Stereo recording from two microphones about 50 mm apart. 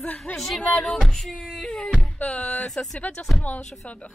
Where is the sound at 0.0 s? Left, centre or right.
Left.